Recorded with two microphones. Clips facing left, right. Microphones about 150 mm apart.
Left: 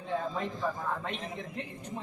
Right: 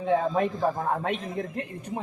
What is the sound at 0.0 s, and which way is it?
A man's voice, 75° right (ahead or behind).